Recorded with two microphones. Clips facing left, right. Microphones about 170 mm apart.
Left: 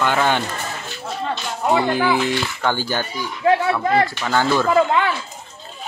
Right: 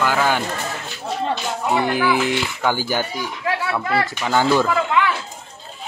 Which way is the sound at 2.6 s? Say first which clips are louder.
Right 2 dB; 10° right (ahead or behind).